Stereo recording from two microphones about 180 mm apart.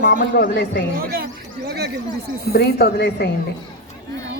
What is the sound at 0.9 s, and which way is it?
Speech, 55° right (ahead or behind).